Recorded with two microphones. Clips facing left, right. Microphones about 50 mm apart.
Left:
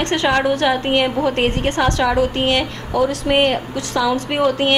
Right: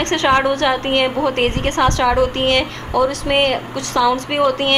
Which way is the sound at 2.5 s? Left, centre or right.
Centre.